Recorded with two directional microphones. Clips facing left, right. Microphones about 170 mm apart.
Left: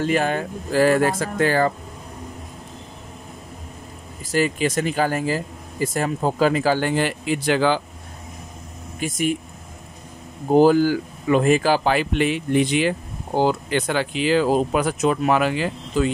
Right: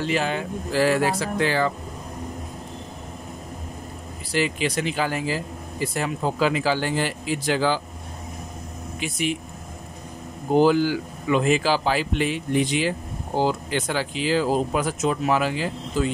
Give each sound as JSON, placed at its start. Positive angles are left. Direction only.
{"t": 0.0, "sound": "speech", "side_deg": 50}
{"t": 4.3, "sound": "speech", "side_deg": 45}
{"t": 9.0, "sound": "speech", "side_deg": 45}
{"t": 10.5, "sound": "speech", "side_deg": 45}